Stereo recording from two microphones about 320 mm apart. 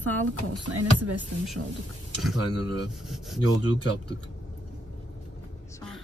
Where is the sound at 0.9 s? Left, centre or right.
Right.